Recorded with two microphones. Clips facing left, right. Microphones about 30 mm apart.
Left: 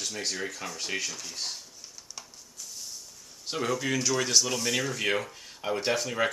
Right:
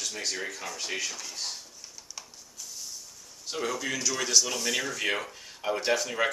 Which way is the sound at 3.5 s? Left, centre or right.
Centre.